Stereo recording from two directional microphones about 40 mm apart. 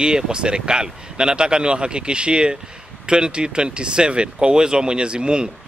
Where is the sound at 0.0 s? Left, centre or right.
Right.